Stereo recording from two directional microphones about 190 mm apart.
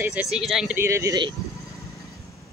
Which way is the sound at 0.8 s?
15° right (ahead or behind).